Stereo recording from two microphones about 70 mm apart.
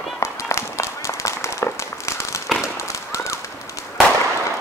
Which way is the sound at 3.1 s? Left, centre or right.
Left.